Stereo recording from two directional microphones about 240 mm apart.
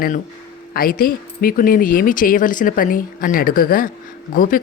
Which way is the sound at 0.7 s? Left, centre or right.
Left.